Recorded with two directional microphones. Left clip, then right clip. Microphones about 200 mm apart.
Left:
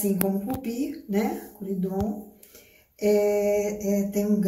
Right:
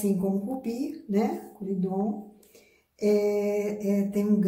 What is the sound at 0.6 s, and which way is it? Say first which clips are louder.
Mantra: left 2 dB; centre (ahead or behind).